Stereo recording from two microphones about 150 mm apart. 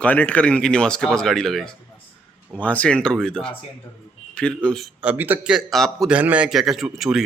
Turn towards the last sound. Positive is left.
turn(degrees=0)  # may be behind; listen again after turning